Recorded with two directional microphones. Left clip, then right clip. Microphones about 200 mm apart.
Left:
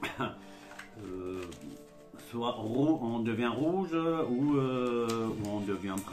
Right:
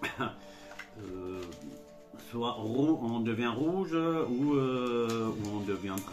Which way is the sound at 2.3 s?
Centre (ahead or behind).